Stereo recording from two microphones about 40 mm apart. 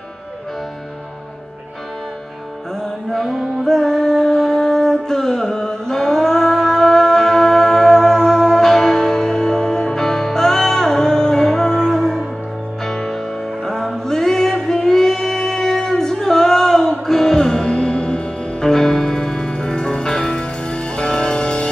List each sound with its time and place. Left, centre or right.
3.1 s music: centre; by 21.6 s left